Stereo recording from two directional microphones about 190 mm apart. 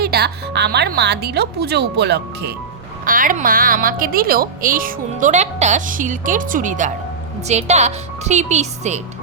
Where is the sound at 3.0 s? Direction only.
45° right (ahead or behind).